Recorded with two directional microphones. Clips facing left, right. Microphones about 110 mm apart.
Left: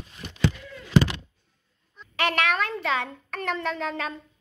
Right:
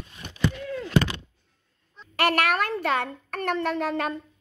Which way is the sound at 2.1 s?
50° right (ahead or behind).